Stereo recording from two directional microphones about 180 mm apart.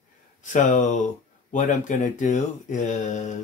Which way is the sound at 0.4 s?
45° left (ahead or behind).